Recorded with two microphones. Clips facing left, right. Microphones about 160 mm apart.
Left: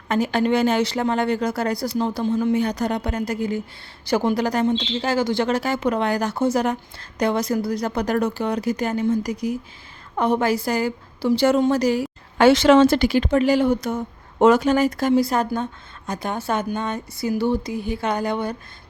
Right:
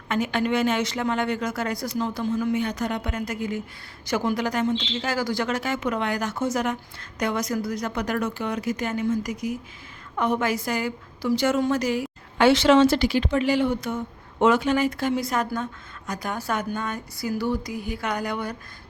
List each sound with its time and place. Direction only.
0.1 s a woman's voice: 35° left (ahead or behind)